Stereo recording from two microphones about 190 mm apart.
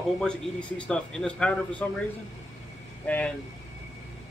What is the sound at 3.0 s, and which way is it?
Speech, 10° left (ahead or behind).